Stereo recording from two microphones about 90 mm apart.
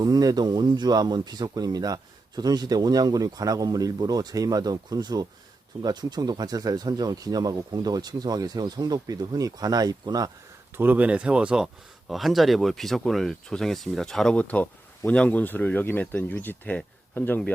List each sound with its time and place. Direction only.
0.0 s speech: 45° right (ahead or behind)
10.8 s speech: 20° right (ahead or behind); by 17.5 s 20° left (ahead or behind)